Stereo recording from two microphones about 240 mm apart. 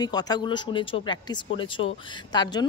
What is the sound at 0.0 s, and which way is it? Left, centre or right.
Speech, centre.